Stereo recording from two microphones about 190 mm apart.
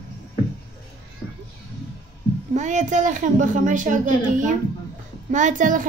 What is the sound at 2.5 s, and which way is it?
A child's voice, 40° right (ahead or behind).